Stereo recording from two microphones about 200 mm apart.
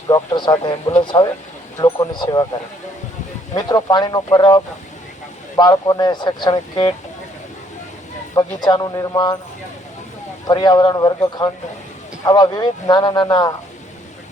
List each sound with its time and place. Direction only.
0.1 s speech: 20° left (ahead or behind)
3.5 s speech: 20° left (ahead or behind)
8.4 s speech: 20° left (ahead or behind)
10.4 s speech: 20° left (ahead or behind)